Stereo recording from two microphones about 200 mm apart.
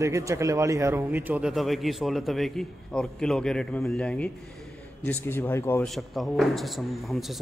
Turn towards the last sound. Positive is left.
turn(degrees=0)  # may be behind; listen again after turning